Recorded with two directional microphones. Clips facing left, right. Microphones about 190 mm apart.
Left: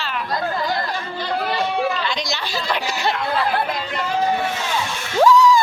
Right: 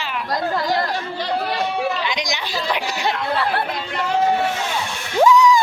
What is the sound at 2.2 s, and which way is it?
Chatter, 15° right (ahead or behind).